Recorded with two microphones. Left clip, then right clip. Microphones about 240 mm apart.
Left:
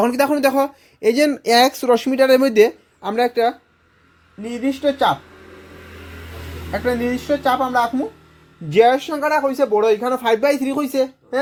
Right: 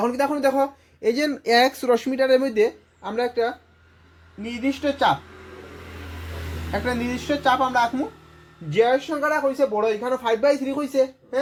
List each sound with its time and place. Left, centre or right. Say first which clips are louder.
0.0 s speech: left 5 dB; left
4.4 s speech: left 5 dB; centre
6.8 s speech: left 7 dB; centre
8.7 s speech: left 5 dB; left